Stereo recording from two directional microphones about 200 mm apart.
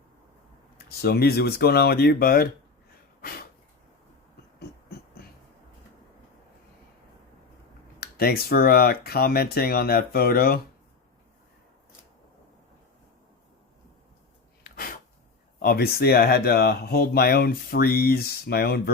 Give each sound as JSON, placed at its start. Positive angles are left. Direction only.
{"t": 1.0, "sound": "speech", "side_deg": 50}
{"t": 3.2, "sound": "a sound", "side_deg": 50}
{"t": 8.0, "sound": "speech", "side_deg": 50}
{"t": 14.6, "sound": "sneeze", "side_deg": 45}
{"t": 15.5, "sound": "speech", "side_deg": 50}